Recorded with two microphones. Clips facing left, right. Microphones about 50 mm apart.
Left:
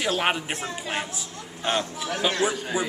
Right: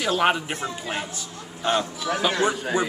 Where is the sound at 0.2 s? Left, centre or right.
Centre.